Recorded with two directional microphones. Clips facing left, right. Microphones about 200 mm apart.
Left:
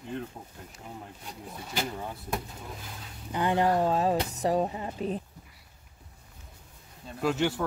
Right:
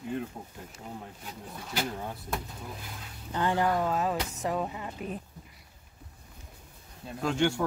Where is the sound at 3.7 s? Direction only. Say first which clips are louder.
Left 3 dB; 30° left (ahead or behind).